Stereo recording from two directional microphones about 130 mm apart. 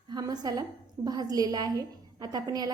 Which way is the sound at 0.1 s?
30° right (ahead or behind).